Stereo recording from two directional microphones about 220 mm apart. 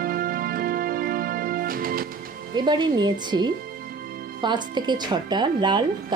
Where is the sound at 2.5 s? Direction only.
20° right (ahead or behind).